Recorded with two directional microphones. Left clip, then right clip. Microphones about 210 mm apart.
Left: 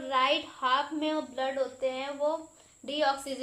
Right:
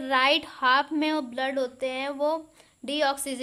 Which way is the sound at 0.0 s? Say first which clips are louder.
Right 4 dB; 30° right (ahead or behind).